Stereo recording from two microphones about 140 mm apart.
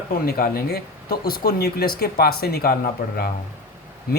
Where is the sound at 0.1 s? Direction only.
90° left.